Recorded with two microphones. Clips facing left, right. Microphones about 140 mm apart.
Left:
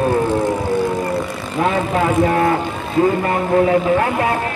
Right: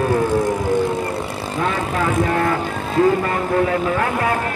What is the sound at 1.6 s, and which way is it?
Vehicle, 35° left (ahead or behind).